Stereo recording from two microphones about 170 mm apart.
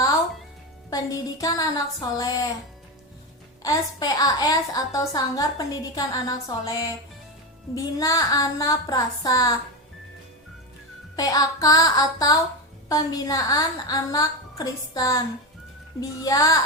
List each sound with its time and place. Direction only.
0.9 s a woman's voice: 20° left (ahead or behind)
3.6 s a woman's voice: 20° left (ahead or behind)
11.2 s a woman's voice: 20° left (ahead or behind)